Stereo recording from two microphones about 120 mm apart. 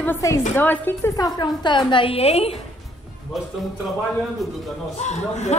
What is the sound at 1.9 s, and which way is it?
Speech, 50° left (ahead or behind).